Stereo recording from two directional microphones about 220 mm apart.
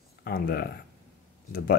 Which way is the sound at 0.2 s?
45° left (ahead or behind).